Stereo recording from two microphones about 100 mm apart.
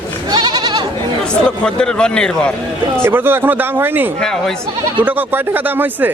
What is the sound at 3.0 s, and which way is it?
Speech, 20° right (ahead or behind).